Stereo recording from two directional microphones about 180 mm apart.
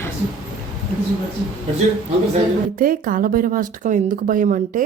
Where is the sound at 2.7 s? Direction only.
50° right (ahead or behind).